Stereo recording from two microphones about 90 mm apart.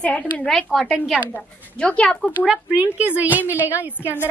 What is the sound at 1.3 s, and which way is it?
A woman's voice, 15° left (ahead or behind).